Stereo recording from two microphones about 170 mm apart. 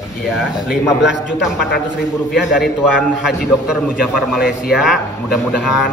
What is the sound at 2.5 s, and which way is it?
A man's voice, 5° right (ahead or behind).